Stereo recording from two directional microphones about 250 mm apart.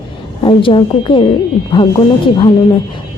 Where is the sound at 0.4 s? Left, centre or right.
Centre.